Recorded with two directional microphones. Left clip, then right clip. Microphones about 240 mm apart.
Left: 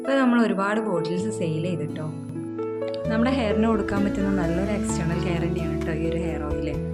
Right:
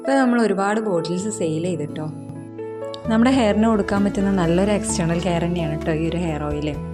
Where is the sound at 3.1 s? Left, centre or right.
Right.